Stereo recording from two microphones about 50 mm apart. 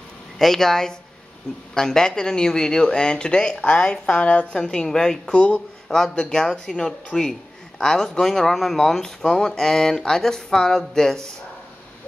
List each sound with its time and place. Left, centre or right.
0.4 s speech: centre; by 4.6 s left
4.6 s speech: centre
5.2 s speech: left